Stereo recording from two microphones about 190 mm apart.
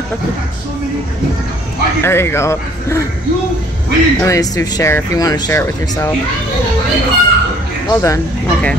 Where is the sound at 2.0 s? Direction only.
10° left (ahead or behind).